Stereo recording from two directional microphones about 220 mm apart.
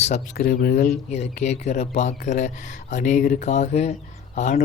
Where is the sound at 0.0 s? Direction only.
35° left (ahead or behind).